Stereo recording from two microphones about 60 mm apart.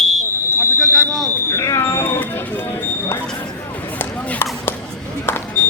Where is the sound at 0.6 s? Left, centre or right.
Left.